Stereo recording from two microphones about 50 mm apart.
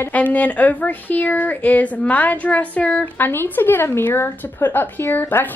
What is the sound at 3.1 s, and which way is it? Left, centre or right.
Speech, left.